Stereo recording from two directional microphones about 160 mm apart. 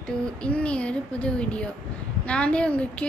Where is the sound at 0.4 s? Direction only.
5° left (ahead or behind).